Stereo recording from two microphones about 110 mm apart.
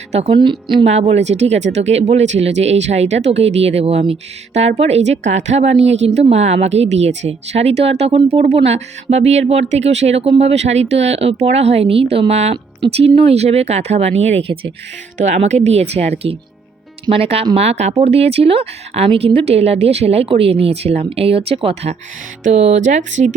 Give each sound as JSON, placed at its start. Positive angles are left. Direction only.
{"t": 0.1, "sound": "a woman's voice", "side_deg": -75}
{"t": 0.3, "sound": "a woman's voice", "side_deg": -45}
{"t": 0.9, "sound": "speech", "side_deg": -80}
{"t": 15.2, "sound": "speech", "side_deg": -85}
{"t": 22.5, "sound": "speech", "side_deg": -90}